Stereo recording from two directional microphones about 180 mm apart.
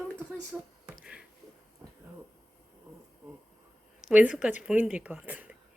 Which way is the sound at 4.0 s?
5° right (ahead or behind).